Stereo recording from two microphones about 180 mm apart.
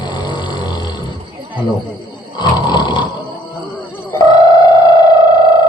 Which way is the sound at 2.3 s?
25° left (ahead or behind).